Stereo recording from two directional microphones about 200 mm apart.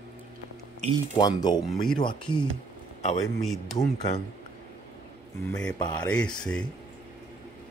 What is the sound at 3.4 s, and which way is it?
Speech, centre (ahead or behind).